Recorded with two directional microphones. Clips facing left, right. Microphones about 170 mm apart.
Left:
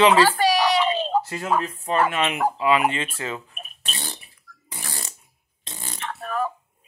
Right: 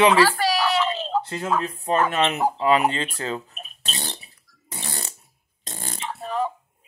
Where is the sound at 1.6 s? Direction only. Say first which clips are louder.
Even; 30° right (ahead or behind).